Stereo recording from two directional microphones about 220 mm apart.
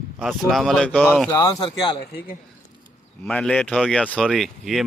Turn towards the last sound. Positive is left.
turn(degrees=0)  # may be behind; listen again after turning